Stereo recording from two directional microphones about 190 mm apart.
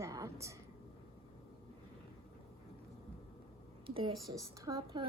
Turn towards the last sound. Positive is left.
turn(degrees=-15)  # may be behind; listen again after turning